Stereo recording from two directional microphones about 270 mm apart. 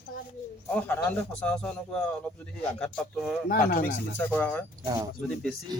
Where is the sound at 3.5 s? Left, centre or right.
Left.